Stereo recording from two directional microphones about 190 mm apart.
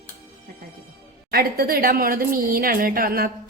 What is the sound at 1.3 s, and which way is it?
A woman's voice, 50° right (ahead or behind).